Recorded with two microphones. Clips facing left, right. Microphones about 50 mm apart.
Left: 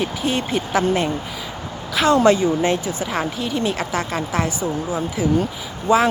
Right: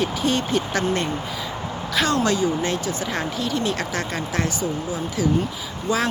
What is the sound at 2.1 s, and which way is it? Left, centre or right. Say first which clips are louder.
Speech: left 9 dB; left.